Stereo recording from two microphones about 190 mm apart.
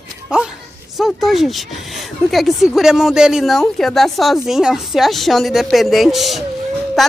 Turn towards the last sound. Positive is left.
turn(degrees=0)  # may be behind; listen again after turning